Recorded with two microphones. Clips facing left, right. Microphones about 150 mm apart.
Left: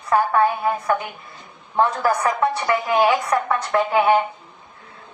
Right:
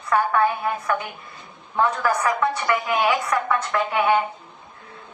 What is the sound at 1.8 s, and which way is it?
A woman's voice, 35° left (ahead or behind).